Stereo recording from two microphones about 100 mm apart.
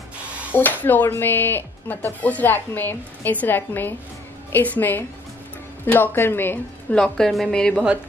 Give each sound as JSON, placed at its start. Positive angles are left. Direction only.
{"t": 0.5, "sound": "a woman's voice", "side_deg": 20}
{"t": 6.9, "sound": "a woman's voice", "side_deg": 5}